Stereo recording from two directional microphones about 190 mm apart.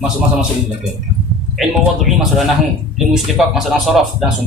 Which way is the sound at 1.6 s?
Centre (ahead or behind).